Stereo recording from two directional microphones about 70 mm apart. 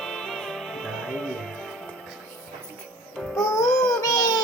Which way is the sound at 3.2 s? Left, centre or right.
Centre.